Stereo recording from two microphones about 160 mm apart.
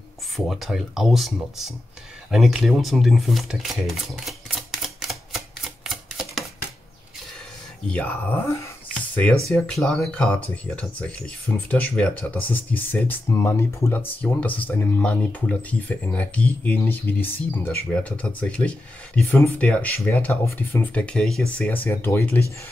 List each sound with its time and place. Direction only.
0.5 s speech: centre (ahead or behind)
2.3 s a sound: centre (ahead or behind)
7.9 s speech: 10° left (ahead or behind)
9.5 s speech: 5° left (ahead or behind)